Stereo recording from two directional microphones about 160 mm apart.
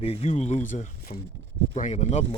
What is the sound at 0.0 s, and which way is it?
Speech, 40° left (ahead or behind).